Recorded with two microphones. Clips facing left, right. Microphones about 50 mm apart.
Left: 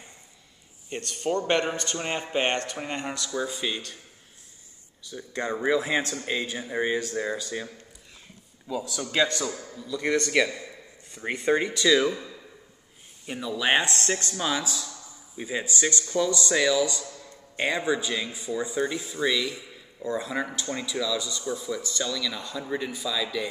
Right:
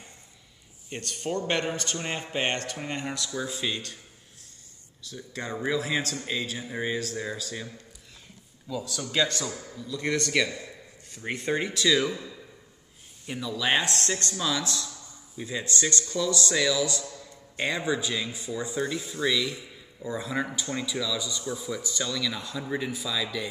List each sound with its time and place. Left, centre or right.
0.8 s speech: centre
5.0 s a man's voice: centre
11.5 s speech: centre
13.4 s speech: centre